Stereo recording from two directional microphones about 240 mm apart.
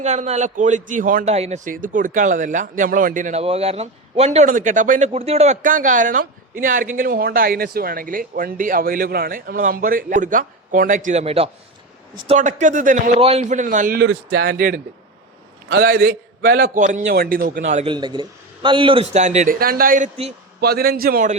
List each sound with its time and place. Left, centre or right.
0.0 s a man's voice: right
17.9 s a man's voice: centre
20.6 s a man's voice: right